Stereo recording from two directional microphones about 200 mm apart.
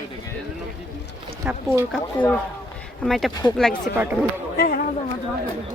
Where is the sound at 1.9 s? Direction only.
5° left (ahead or behind).